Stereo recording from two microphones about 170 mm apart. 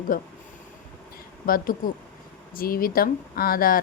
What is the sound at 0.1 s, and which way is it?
Speech, 55° left (ahead or behind).